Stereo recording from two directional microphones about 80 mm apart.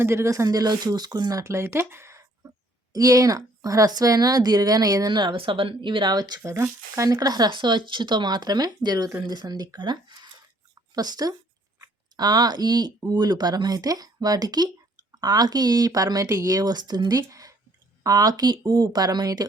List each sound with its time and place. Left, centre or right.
0.0 s speech: right
2.4 s a sound: right
2.9 s speech: right
5.2 s speech: right
6.4 s speech: right